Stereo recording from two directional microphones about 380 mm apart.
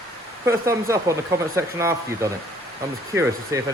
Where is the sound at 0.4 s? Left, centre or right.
Centre.